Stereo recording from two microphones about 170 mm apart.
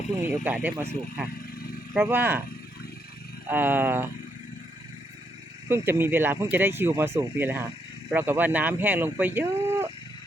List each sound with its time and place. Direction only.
0.3 s speech: 10° right (ahead or behind)
1.4 s a sound: 60° left (ahead or behind)
1.9 s speech: 15° right (ahead or behind)
3.5 s speech: 10° right (ahead or behind)
5.6 s speech: 15° right (ahead or behind)